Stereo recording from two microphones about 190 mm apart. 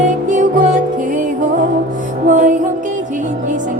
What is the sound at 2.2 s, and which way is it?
Music, 45° right (ahead or behind).